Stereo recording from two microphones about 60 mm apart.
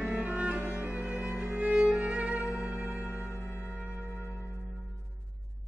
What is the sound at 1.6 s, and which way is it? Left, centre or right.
Violin, right.